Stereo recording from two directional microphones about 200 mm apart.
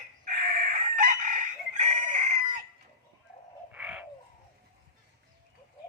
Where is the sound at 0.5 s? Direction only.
40° right (ahead or behind).